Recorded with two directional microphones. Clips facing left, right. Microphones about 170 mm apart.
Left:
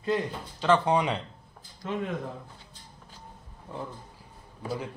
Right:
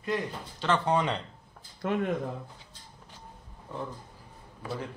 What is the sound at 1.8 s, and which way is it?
Speech, 55° right (ahead or behind).